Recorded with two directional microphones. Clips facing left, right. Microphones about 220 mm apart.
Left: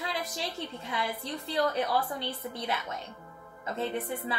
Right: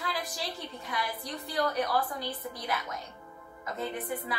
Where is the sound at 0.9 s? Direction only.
25° left (ahead or behind).